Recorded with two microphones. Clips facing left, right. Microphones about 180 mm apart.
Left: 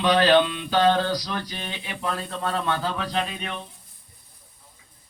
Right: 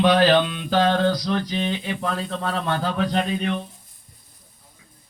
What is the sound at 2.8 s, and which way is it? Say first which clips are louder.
Speech: right 4 dB; 55° right (ahead or behind).